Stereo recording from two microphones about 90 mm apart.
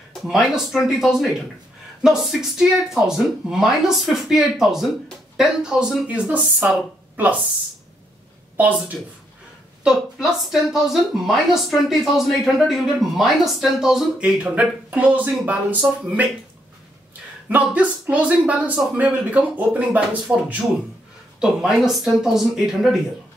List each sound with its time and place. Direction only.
0.1 s speech: centre (ahead or behind); by 7.3 s 15° right (ahead or behind)
8.5 s speech: 20° right (ahead or behind)
9.8 s speech: 5° right (ahead or behind)
17.5 s speech: 20° right (ahead or behind); by 22.8 s 5° right (ahead or behind)